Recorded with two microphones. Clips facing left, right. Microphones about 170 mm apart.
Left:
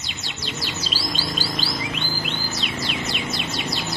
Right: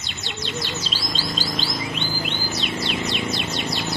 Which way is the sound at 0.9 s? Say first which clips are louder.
Left 1 dB; 10° left (ahead or behind).